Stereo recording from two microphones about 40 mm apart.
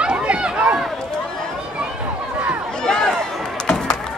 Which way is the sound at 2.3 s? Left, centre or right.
Right.